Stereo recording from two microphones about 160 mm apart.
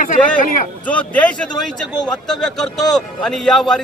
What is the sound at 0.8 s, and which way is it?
A man's voice, 10° left (ahead or behind).